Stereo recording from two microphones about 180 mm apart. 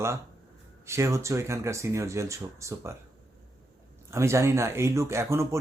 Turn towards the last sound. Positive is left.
turn(degrees=-15)  # may be behind; listen again after turning